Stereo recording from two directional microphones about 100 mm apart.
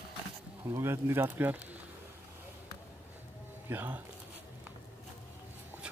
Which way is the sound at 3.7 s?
20° right (ahead or behind).